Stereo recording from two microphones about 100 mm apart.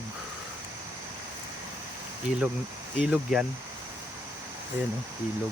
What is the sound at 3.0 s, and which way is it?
Speech, 10° right (ahead or behind).